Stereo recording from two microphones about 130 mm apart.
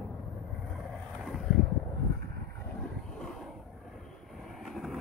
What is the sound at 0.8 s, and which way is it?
Vehicle, centre (ahead or behind).